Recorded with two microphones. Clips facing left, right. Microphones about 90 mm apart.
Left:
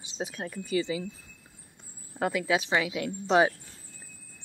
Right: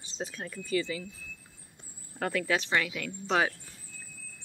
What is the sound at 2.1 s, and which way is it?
Speech, 15° left (ahead or behind).